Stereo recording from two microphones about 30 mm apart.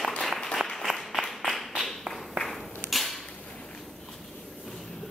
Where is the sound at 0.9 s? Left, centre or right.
Right.